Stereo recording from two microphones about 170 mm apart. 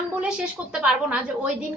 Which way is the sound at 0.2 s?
5° right (ahead or behind).